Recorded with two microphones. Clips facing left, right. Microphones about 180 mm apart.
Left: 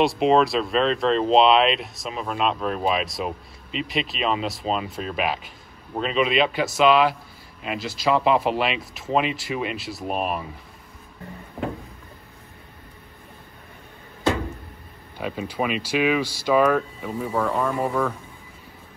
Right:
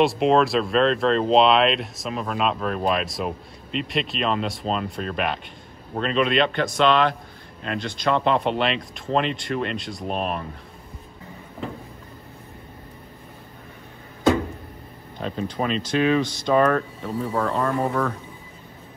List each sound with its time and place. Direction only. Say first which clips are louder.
0.0 s speech: even; centre (ahead or behind)
15.1 s speech: even; 10° left (ahead or behind)